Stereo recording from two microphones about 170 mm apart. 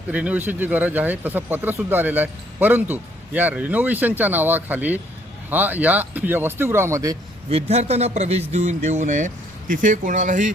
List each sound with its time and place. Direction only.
0.1 s speech: 10° right (ahead or behind)
7.5 s a man's voice: 40° right (ahead or behind)